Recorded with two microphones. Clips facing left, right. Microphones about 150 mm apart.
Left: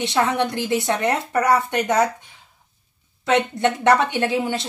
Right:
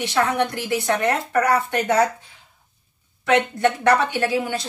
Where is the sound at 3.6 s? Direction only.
20° left (ahead or behind).